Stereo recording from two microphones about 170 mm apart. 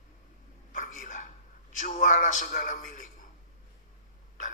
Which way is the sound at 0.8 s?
45° left (ahead or behind).